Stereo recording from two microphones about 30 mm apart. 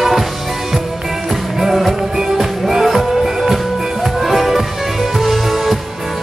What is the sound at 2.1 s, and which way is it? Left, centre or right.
Music, centre.